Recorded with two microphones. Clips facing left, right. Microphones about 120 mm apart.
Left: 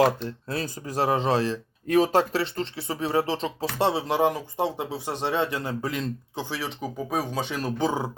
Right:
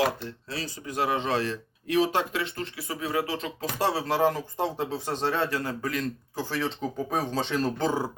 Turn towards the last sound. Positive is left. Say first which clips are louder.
# even
turn(degrees=10)  # may be behind; listen again after turning